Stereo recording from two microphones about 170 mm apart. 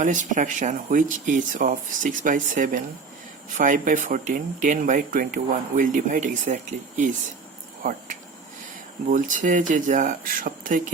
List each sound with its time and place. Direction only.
0.0 s speech: 50° right (ahead or behind)